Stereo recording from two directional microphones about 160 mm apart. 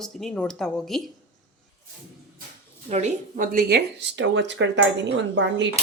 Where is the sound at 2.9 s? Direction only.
45° right (ahead or behind); by 4.6 s 90° right.